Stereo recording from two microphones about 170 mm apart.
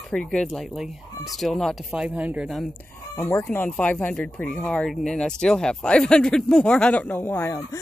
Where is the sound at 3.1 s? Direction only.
15° left (ahead or behind).